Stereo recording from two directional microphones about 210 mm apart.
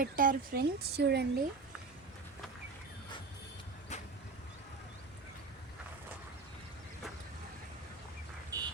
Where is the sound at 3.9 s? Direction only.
35° left (ahead or behind).